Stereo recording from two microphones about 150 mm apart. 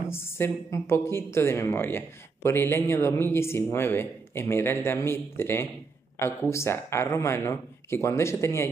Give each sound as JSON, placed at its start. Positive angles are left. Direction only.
{"t": 0.1, "sound": "a woman's voice", "side_deg": 15}